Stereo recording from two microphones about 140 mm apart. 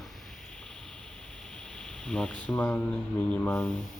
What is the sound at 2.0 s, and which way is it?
Speech, 5° left (ahead or behind).